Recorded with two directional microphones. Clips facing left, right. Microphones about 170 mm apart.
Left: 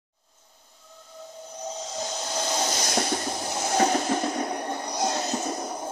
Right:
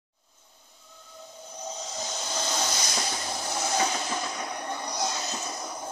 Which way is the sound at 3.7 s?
50° left (ahead or behind).